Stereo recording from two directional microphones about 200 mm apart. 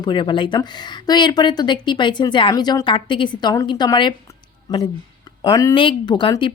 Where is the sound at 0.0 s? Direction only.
20° left (ahead or behind).